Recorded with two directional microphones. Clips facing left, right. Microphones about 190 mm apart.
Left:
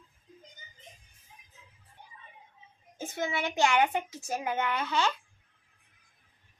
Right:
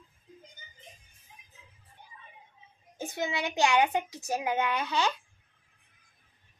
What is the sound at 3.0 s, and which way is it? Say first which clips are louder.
A child's voice: even; 15° right (ahead or behind).